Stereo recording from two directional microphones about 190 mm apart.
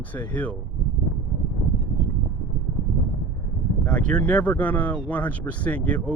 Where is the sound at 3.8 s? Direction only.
5° left (ahead or behind).